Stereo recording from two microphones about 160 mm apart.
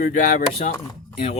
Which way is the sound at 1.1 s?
40° left (ahead or behind).